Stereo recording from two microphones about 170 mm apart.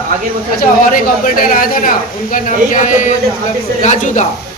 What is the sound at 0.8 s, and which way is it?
A man's voice, 55° left (ahead or behind).